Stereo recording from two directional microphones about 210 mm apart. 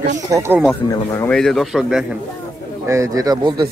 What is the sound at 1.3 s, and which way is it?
Speech, centre (ahead or behind).